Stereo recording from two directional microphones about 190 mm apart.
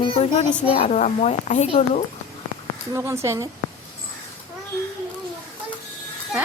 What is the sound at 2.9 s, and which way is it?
Speech, 15° right (ahead or behind).